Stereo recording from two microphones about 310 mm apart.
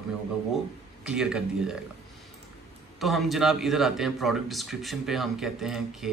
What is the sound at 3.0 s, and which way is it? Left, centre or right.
Speech, centre.